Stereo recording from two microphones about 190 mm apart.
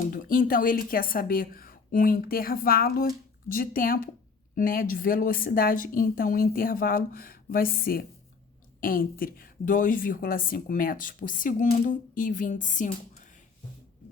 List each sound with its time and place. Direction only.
0.1 s a woman's voice: 45° left (ahead or behind)